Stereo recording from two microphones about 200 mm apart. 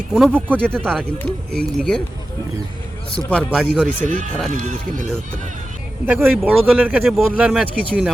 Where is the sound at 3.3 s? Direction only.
5° left (ahead or behind).